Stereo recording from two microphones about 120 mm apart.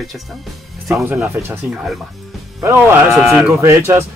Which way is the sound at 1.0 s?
15° right (ahead or behind).